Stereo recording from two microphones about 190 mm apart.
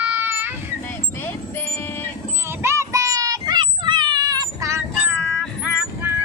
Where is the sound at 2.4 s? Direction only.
15° right (ahead or behind).